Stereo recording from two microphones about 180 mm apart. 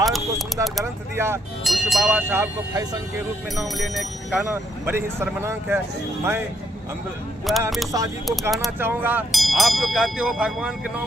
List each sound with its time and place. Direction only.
0.0 s vehicle: centre (ahead or behind)
1.1 s speech: 15° right (ahead or behind)
1.6 s speech: centre (ahead or behind); by 3.0 s 15° right (ahead or behind)
3.5 s speech: centre (ahead or behind)
4.9 s speech: 15° right (ahead or behind)
7.5 s speech: centre (ahead or behind)
7.9 s speech: 20° right (ahead or behind)
8.4 s speech: centre (ahead or behind)
8.8 s speech: 10° right (ahead or behind)
9.3 s speech: centre (ahead or behind)